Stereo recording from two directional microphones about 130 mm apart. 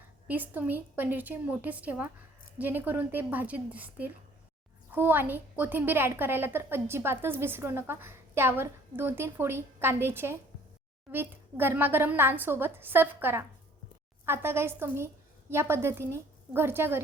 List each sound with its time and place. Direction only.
0.3 s a woman's voice: 15° right (ahead or behind)